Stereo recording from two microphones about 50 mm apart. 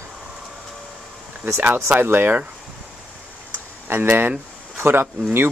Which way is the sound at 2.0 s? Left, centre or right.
Right.